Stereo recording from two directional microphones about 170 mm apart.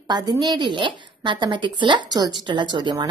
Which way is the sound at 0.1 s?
25° right (ahead or behind).